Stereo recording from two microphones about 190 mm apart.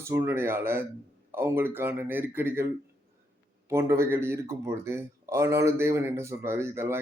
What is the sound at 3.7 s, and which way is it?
Speech, 15° right (ahead or behind).